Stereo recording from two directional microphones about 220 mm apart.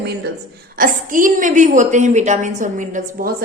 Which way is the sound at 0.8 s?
35° right (ahead or behind).